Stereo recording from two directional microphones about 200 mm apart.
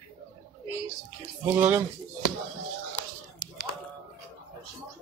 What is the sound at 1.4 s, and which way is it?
Speech, 10° right (ahead or behind).